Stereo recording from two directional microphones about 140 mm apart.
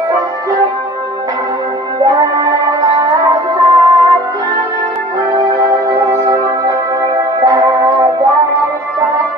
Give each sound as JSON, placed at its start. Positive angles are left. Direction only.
{"t": 2.4, "sound": "music", "side_deg": -25}
{"t": 5.3, "sound": "music", "side_deg": -25}
{"t": 7.4, "sound": "music", "side_deg": -25}